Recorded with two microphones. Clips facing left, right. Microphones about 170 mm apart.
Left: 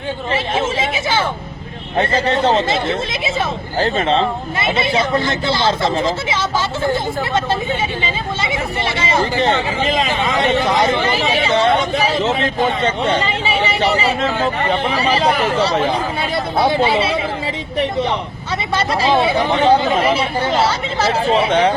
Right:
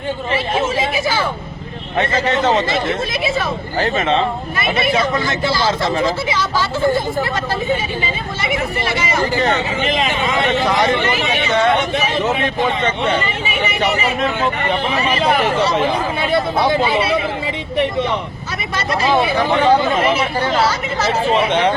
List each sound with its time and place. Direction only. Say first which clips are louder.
0.3 s speech: right 1 dB; 25° left (ahead or behind)
18.7 s speech: left 1 dB; 30° left (ahead or behind)